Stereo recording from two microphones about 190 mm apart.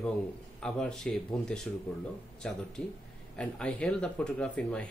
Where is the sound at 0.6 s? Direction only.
5° left (ahead or behind).